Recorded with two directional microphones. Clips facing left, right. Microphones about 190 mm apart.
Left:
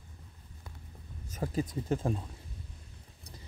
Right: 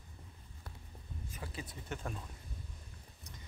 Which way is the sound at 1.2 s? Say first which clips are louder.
Left 13 dB; 40° left (ahead or behind).